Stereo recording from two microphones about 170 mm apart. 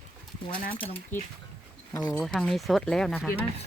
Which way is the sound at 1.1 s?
15° left (ahead or behind).